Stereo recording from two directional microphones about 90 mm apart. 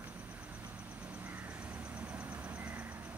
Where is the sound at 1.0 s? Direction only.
20° right (ahead or behind).